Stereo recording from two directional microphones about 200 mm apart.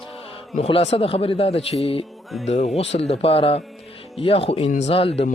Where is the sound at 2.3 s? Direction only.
Centre (ahead or behind).